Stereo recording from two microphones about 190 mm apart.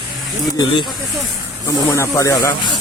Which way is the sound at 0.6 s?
25° left (ahead or behind).